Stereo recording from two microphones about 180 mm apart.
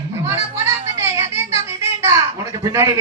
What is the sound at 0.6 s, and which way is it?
Children playing, 15° right (ahead or behind).